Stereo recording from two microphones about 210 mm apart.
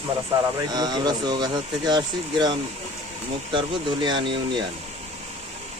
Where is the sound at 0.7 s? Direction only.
20° right (ahead or behind).